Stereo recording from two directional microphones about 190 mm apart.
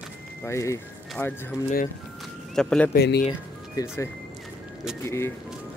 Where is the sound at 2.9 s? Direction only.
60° left (ahead or behind).